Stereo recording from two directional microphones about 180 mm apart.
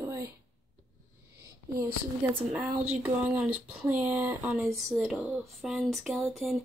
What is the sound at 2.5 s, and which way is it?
Speech, 10° right (ahead or behind).